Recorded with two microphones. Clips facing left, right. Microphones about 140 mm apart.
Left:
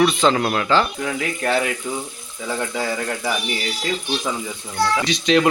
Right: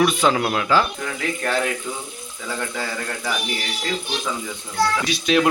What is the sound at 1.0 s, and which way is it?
Speech, 10° left (ahead or behind).